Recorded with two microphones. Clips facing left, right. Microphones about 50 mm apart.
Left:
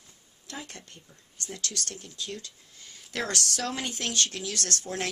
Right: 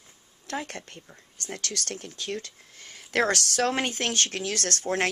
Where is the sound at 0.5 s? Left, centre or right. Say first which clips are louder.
Right 8 dB; right.